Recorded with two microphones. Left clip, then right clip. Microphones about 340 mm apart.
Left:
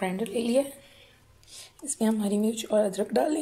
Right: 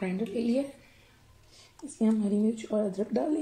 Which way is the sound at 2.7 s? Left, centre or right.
Left.